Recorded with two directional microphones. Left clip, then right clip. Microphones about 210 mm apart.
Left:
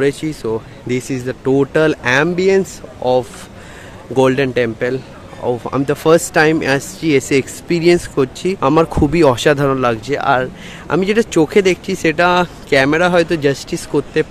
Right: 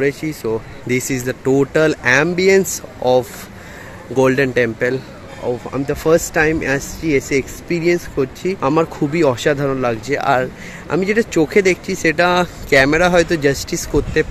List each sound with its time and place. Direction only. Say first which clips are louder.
0.0 s speech: left 2 dB; 10° left (ahead or behind)
5.4 s speech: left 3 dB; 20° left (ahead or behind); by 14.2 s centre (ahead or behind)